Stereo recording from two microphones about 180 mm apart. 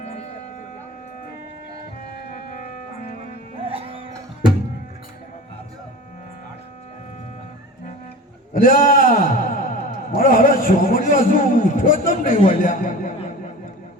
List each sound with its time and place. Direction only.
3.6 s music: 30° right (ahead or behind)
8.5 s a man's voice: 50° left (ahead or behind)